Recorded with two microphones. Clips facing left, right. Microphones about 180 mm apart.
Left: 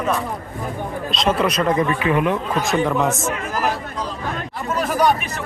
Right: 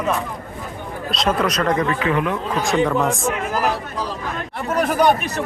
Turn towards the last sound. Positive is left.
turn(degrees=-60)  # may be behind; listen again after turning